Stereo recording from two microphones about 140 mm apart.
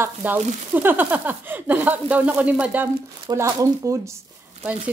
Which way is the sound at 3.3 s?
25° right (ahead or behind).